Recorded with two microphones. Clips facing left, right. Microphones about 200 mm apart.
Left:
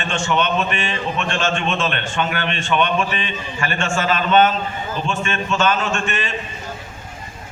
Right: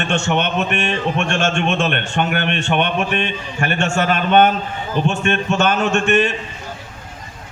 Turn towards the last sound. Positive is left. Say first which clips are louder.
# right 8 dB
turn(degrees=-55)  # may be behind; listen again after turning